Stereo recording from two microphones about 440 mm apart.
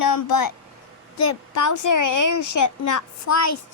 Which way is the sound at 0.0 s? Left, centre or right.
Left.